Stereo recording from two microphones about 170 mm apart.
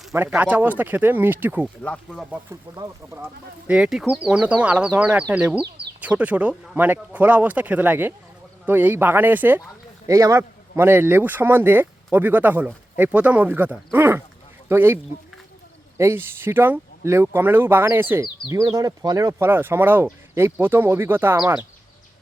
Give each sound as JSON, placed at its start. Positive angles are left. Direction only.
{"t": 0.1, "sound": "speech", "side_deg": -10}
{"t": 1.8, "sound": "speech", "side_deg": 5}
{"t": 2.3, "sound": "speech", "side_deg": -15}
{"t": 3.7, "sound": "speech", "side_deg": -5}
{"t": 16.0, "sound": "speech", "side_deg": -15}